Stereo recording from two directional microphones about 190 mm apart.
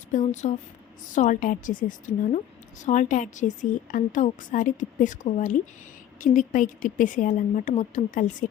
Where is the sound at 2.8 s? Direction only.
40° left (ahead or behind).